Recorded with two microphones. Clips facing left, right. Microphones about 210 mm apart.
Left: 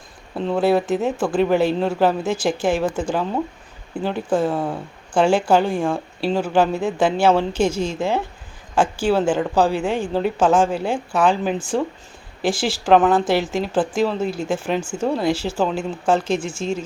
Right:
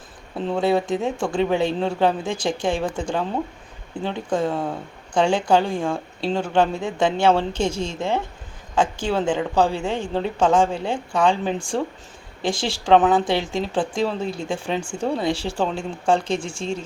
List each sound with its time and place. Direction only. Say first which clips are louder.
0.3 s speech: left 2 dB; centre (ahead or behind)
7.6 s speech: left 4 dB; 25° right (ahead or behind)
7.9 s speech: left 2 dB; 5° left (ahead or behind)
9.7 s speech: left 3 dB; 25° right (ahead or behind)
10.3 s speech: even; 5° left (ahead or behind)
16.3 s speech: left 3 dB; 30° right (ahead or behind)